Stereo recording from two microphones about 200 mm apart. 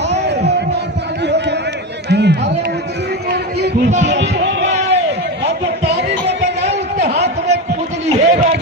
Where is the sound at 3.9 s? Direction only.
35° right (ahead or behind).